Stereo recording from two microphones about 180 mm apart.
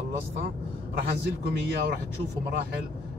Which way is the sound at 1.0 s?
65° right (ahead or behind).